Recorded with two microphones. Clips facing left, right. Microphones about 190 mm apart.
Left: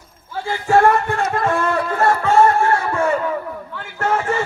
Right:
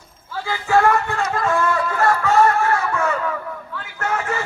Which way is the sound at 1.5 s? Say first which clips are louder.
Right 1 dB; 30° left (ahead or behind).